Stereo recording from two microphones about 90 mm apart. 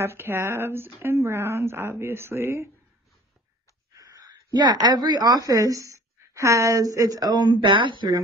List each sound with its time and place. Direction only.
0.0 s a woman's voice: 30° right (ahead or behind)
3.9 s a sound: 40° right (ahead or behind)
5.5 s a woman's voice: 40° right (ahead or behind)
7.6 s speech: 65° right (ahead or behind)